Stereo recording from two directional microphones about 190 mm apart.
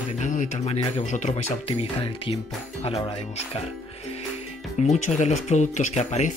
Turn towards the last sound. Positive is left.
turn(degrees=40)  # may be behind; listen again after turning